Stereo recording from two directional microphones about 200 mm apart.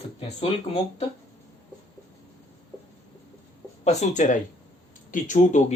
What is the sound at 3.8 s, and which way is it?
Speech, 35° left (ahead or behind).